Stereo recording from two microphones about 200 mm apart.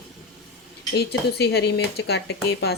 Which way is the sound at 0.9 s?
55° left (ahead or behind).